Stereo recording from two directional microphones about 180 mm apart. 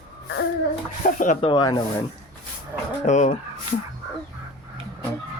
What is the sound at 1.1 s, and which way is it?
Speech, 45° left (ahead or behind).